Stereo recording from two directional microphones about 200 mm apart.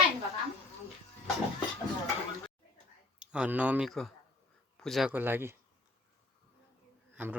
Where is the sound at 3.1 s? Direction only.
5° right (ahead or behind).